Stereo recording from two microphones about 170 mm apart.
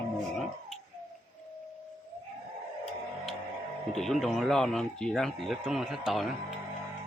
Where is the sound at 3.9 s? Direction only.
Centre (ahead or behind).